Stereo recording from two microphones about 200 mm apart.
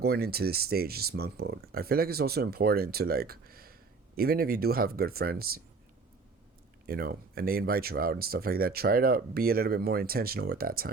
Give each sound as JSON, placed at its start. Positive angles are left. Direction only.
{"t": 0.0, "sound": "speech", "side_deg": -50}
{"t": 6.8, "sound": "speech", "side_deg": -50}